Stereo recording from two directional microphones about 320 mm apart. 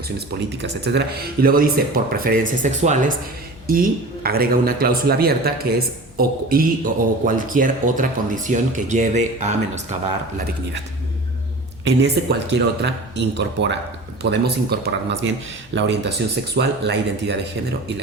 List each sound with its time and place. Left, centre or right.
0.5 s speech: right
11.9 s speech: right